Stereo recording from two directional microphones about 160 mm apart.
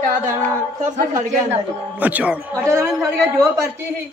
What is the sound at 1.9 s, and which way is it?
A man's voice, 10° right (ahead or behind).